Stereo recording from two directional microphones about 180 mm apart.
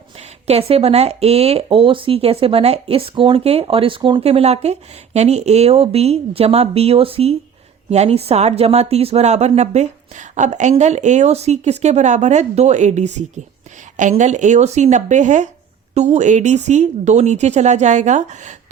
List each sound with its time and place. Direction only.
0.4 s speech: 35° right (ahead or behind)